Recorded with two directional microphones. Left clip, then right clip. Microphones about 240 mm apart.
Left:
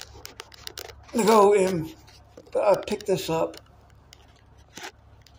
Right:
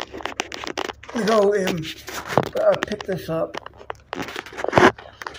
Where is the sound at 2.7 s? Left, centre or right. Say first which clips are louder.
Right 1 dB; left.